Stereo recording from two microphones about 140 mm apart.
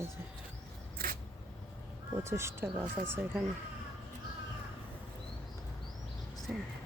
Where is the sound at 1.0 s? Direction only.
90° right.